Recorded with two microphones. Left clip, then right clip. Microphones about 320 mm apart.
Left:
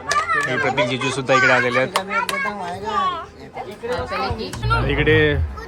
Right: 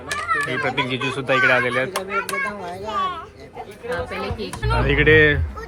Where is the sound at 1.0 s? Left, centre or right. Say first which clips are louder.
Left 1 dB; centre.